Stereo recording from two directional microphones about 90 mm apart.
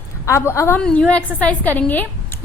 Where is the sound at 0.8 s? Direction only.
10° left (ahead or behind).